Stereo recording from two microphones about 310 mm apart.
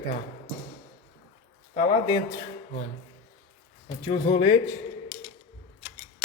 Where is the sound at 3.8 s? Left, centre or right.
Centre.